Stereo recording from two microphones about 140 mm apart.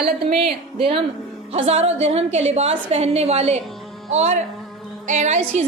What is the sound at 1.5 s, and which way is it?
A woman's voice, 50° right (ahead or behind).